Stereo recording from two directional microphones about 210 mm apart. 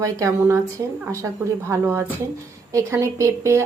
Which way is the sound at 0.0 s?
15° right (ahead or behind).